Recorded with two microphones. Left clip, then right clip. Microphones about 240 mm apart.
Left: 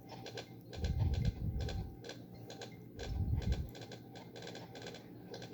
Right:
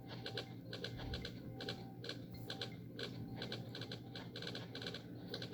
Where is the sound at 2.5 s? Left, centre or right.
Right.